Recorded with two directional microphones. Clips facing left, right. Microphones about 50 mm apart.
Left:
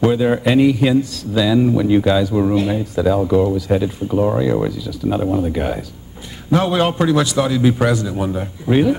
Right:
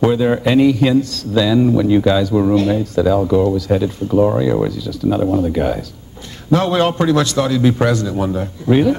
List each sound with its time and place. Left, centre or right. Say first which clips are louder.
0.1 s a man's voice: right 1 dB; centre